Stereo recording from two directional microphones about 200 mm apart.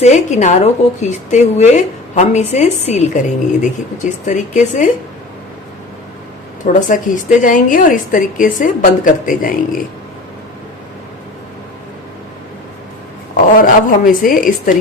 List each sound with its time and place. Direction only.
0.0 s a woman's voice: 35° left (ahead or behind)
6.7 s a woman's voice: 40° left (ahead or behind)
13.3 s a woman's voice: 45° left (ahead or behind)